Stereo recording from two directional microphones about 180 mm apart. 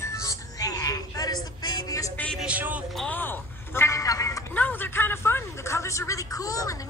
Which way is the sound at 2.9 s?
10° left (ahead or behind).